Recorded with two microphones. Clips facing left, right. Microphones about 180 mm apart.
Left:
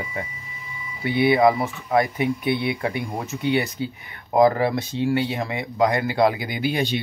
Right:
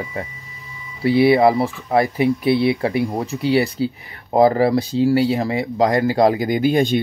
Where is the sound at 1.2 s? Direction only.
30° right (ahead or behind).